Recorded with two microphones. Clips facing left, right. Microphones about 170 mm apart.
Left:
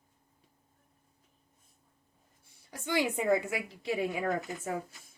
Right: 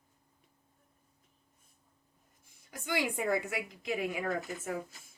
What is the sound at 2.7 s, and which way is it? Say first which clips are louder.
Speech: left 3 dB; 30° left (ahead or behind).